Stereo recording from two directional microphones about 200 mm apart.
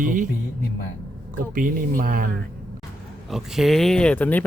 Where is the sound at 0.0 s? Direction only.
40° right (ahead or behind).